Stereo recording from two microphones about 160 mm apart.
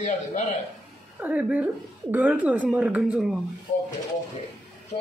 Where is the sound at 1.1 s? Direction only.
10° right (ahead or behind).